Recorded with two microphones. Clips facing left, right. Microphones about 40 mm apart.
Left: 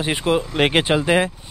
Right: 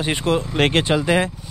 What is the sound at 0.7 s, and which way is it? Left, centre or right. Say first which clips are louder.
Speech: left 2 dB; centre.